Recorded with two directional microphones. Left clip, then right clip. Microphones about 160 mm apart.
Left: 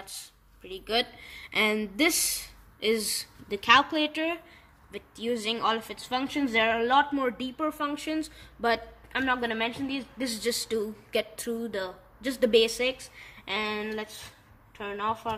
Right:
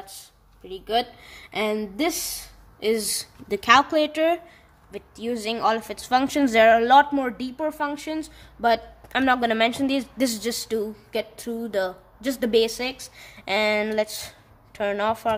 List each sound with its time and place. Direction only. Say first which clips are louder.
0.7 s speech: right 4 dB; 25° right (ahead or behind)
2.8 s a woman's voice: right 3 dB; 40° right (ahead or behind)
7.5 s speech: right 4 dB; 20° right (ahead or behind)
8.0 s speech: right 2 dB; 35° right (ahead or behind)
9.2 s a woman's voice: right 8 dB; 50° right (ahead or behind)
13.5 s speech: right 9 dB; 50° right (ahead or behind)